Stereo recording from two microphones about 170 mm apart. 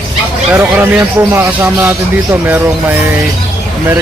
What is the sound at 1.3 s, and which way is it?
Speech, 10° right (ahead or behind).